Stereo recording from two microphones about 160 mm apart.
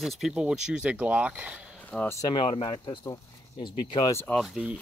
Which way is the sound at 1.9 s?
15° left (ahead or behind).